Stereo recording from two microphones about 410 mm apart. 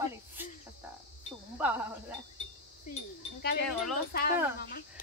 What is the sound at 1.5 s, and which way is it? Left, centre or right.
Wind chime, centre.